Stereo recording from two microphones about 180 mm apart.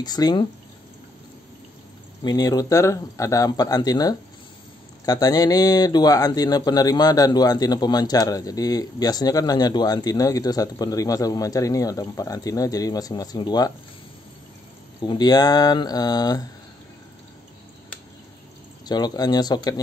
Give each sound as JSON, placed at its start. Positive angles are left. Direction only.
{"t": 0.0, "sound": "speech", "side_deg": 20}
{"t": 2.2, "sound": "speech", "side_deg": 20}
{"t": 15.0, "sound": "speech", "side_deg": 25}
{"t": 18.9, "sound": "speech", "side_deg": 25}